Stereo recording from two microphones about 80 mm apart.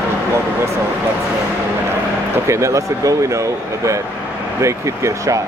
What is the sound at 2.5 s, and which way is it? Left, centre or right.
Speech, right.